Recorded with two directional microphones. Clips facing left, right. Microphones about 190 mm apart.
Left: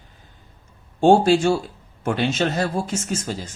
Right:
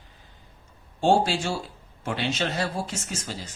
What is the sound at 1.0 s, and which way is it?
Speech, 50° left (ahead or behind).